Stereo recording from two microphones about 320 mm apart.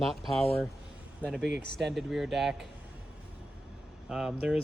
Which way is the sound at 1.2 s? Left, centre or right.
Centre.